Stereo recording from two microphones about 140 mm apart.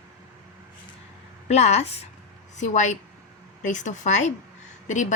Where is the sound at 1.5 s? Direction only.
50° left (ahead or behind).